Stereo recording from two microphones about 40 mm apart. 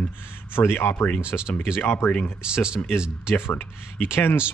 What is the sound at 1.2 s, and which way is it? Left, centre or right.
A man's voice, right.